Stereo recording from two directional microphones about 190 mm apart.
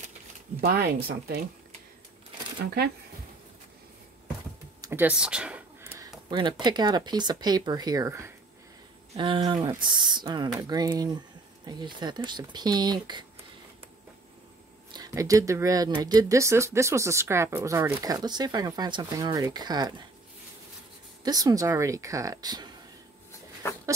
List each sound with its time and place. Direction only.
0.6 s speech: 55° right (ahead or behind)
2.6 s speech: 55° right (ahead or behind)
4.8 s a sound: 10° right (ahead or behind)
6.6 s speech: 25° right (ahead or behind)
14.9 s speech: 20° right (ahead or behind)
21.2 s speech: 20° right (ahead or behind)